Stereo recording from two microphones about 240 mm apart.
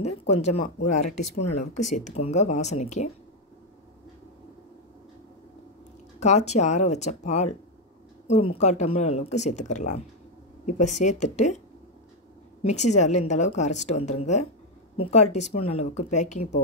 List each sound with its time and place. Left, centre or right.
0.0 s speech: left
0.8 s speech: left
1.9 s speech: left
6.1 s speech: left
12.6 s speech: left